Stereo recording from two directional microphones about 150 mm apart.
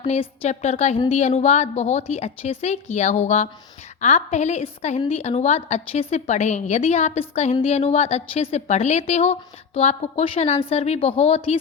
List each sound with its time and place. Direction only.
0.1 s a woman's voice: 45° left (ahead or behind)